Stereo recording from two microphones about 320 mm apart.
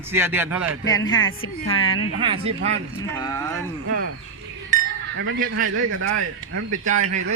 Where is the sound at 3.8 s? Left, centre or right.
Right.